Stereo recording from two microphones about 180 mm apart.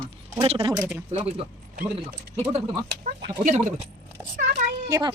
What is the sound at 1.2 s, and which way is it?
Speech, 35° right (ahead or behind).